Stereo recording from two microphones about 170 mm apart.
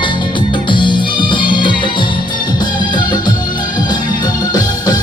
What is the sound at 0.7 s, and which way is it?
Music, 30° left (ahead or behind).